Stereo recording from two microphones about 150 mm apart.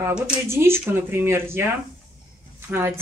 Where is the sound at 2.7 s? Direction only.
15° right (ahead or behind).